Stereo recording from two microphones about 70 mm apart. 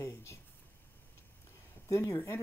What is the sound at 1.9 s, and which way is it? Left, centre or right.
Speech, left.